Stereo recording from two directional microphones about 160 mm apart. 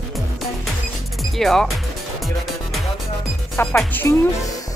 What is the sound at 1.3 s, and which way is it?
Speech, centre (ahead or behind).